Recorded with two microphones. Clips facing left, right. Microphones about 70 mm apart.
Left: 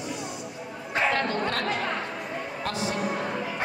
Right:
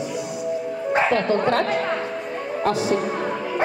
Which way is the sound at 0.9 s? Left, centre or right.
Right.